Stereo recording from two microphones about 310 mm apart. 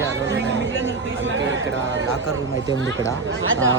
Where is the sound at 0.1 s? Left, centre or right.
Right.